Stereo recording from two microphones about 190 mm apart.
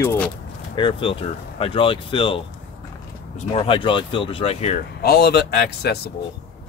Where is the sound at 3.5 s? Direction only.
30° left (ahead or behind).